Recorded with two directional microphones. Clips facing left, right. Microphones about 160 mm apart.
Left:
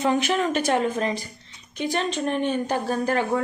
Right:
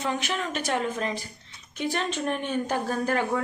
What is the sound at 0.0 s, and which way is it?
Speech, 40° left (ahead or behind).